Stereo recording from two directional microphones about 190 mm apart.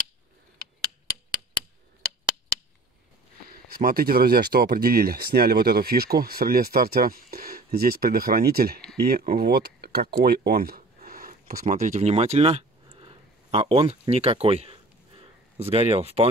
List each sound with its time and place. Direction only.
3.5 s speech: 50° right (ahead or behind); by 16.3 s 30° right (ahead or behind)